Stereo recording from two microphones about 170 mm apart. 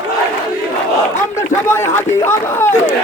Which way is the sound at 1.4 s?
15° left (ahead or behind).